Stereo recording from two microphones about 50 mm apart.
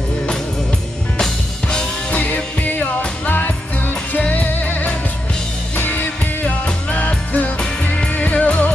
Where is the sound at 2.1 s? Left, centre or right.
Left.